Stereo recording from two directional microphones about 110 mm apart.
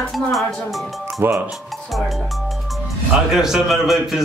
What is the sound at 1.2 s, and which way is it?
Speech, 20° right (ahead or behind).